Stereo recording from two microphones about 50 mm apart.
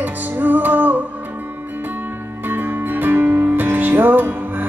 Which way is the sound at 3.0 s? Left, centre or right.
Right.